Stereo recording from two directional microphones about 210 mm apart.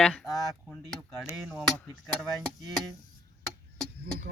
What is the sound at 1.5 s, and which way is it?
Speech, centre (ahead or behind).